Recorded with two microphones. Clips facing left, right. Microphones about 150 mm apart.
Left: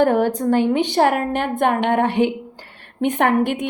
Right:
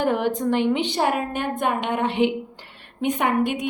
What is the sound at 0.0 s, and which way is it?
A woman's voice, 45° left (ahead or behind).